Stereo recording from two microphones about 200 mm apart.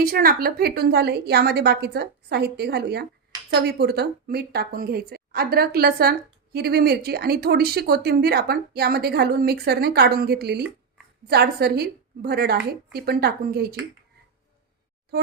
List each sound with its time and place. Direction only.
0.0 s speech: 45° right (ahead or behind)